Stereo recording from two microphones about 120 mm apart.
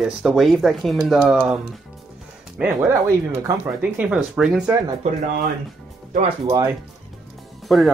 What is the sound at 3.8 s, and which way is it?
Speech, 10° right (ahead or behind).